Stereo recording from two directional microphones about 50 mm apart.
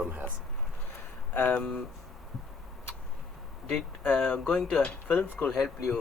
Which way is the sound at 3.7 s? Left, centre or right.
Left.